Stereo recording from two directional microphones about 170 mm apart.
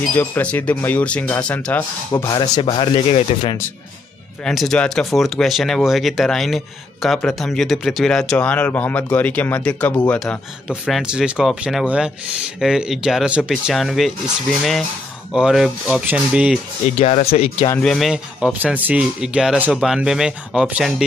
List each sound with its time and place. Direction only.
0.1 s speech: 10° left (ahead or behind)
2.2 s speech: 25° left (ahead or behind)
4.5 s speech: 5° left (ahead or behind)
17.0 s speech: 35° left (ahead or behind)
17.6 s speech: 5° left (ahead or behind)